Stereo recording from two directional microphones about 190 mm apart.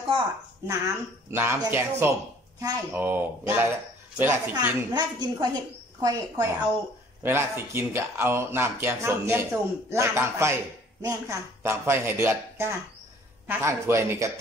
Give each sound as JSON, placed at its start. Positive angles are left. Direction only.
{"t": 0.7, "sound": "speech", "side_deg": -15}
{"t": 4.9, "sound": "a woman's voice", "side_deg": -20}